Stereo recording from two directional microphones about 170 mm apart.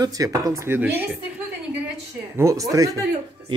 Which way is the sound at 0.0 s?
20° right (ahead or behind).